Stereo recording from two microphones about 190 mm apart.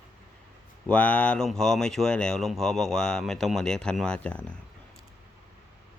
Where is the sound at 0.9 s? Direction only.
5° left (ahead or behind).